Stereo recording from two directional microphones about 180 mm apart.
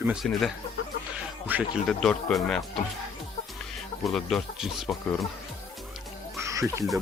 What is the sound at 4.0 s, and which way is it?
Speech, centre (ahead or behind).